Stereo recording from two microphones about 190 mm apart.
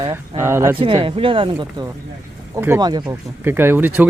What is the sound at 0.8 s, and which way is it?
Speech, 30° right (ahead or behind).